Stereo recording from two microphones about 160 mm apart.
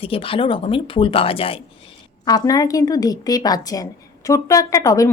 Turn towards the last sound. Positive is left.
turn(degrees=20)  # may be behind; listen again after turning